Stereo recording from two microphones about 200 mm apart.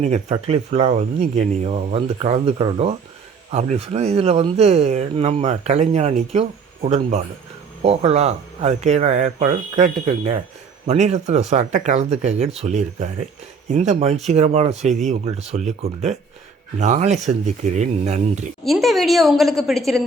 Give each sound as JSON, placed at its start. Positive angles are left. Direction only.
{"t": 0.0, "sound": "speech", "side_deg": -30}
{"t": 18.6, "sound": "a woman's voice", "side_deg": 0}